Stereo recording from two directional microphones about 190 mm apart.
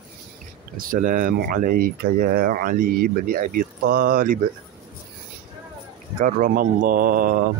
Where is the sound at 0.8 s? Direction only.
45° right (ahead or behind).